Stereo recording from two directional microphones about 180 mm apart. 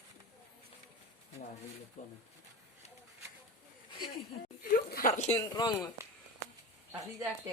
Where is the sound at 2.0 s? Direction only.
45° left (ahead or behind).